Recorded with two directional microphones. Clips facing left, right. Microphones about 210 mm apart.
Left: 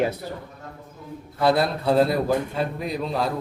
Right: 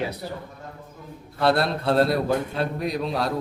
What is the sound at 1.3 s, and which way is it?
A man's voice, centre (ahead or behind).